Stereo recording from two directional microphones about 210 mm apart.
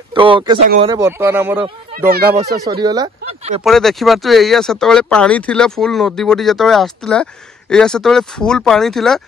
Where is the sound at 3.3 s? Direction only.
30° right (ahead or behind).